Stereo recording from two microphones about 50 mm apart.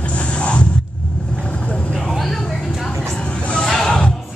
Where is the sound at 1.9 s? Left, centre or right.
Centre.